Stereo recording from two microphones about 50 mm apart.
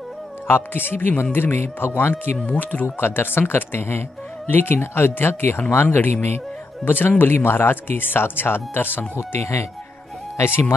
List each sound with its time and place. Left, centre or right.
0.7 s speech: left
2.6 s speech: left
3.0 s speech: left
9.4 s speech: left
10.3 s speech: left